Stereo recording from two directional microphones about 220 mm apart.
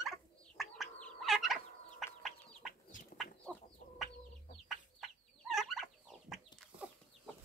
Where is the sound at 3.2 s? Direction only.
Centre (ahead or behind).